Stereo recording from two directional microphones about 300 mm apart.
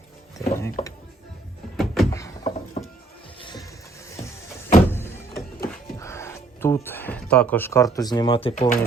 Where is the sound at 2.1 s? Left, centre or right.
Centre.